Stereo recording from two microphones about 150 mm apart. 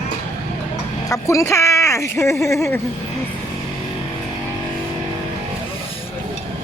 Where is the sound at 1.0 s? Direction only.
20° left (ahead or behind).